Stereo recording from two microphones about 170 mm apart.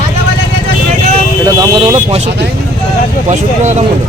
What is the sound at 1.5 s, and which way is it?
Vehicle, 25° right (ahead or behind).